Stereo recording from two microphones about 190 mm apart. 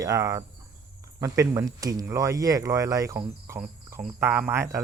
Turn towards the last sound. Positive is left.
turn(degrees=-15)  # may be behind; listen again after turning